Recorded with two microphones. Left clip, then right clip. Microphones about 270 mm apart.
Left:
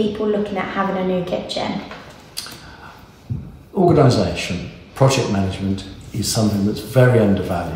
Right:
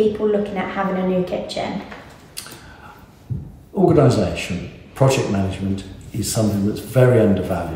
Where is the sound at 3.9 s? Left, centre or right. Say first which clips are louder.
Left 1 dB; centre.